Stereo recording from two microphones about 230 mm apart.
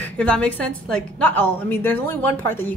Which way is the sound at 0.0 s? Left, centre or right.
Centre.